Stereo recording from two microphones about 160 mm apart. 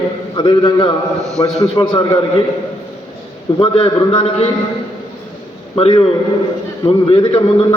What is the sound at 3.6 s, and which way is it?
Speech, 35° left (ahead or behind).